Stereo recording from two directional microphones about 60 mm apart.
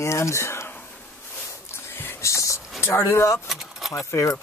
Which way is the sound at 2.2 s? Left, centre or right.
Left.